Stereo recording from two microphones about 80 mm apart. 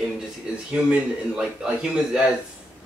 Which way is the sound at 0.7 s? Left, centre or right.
Centre.